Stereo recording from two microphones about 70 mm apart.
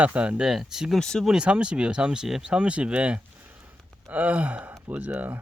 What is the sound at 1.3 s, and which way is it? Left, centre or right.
Speech, centre.